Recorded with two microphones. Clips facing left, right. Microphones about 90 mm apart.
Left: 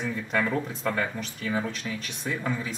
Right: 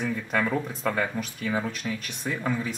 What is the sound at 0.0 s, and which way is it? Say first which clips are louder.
Speech: right 1 dB; centre (ahead or behind).